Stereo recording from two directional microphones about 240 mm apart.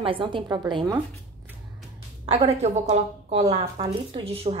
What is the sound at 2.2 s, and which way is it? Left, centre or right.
A woman's voice, right.